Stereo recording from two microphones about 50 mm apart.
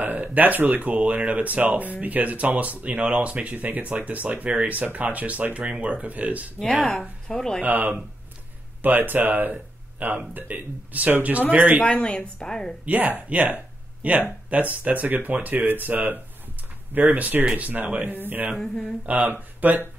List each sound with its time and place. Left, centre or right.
0.0 s speech: right
6.6 s speech: centre
7.6 s speech: right
11.8 s speech: centre
12.8 s speech: right
18.6 s speech: centre
19.0 s speech: right